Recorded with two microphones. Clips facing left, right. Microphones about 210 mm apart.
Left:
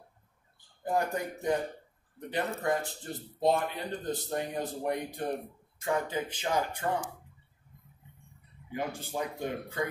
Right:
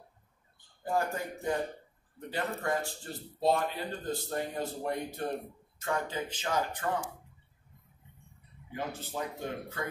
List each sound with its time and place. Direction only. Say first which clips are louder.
0.8 s speech: left 2 dB; 20° left (ahead or behind)
8.7 s speech: left 3 dB; 15° left (ahead or behind)